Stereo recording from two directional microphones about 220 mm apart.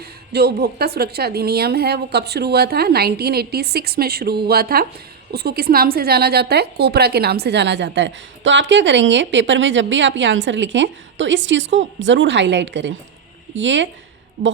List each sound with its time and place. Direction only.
0.0 s a woman's voice: 45° right (ahead or behind)